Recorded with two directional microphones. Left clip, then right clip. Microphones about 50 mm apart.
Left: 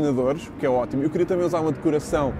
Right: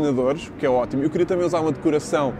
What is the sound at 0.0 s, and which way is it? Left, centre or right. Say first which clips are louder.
Speech: right 1 dB; centre.